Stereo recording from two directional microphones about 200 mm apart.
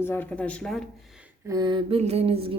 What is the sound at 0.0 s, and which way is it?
Speech, 10° left (ahead or behind).